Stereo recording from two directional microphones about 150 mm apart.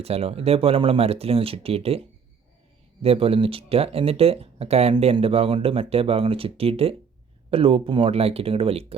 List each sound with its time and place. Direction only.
0.0 s speech: 40° right (ahead or behind)